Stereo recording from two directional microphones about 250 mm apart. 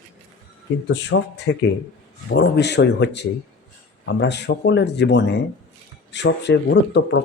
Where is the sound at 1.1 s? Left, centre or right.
Left.